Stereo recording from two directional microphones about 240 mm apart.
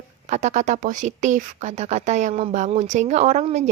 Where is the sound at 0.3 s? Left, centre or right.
Right.